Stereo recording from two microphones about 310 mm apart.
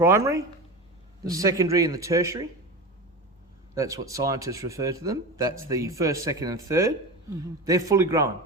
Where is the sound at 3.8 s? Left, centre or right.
Centre.